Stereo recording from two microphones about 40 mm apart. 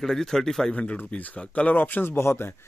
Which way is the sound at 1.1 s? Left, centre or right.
Left.